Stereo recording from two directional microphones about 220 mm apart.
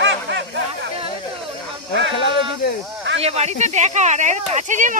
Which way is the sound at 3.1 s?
30° right (ahead or behind).